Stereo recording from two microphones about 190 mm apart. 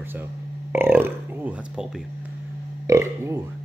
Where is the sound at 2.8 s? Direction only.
15° right (ahead or behind).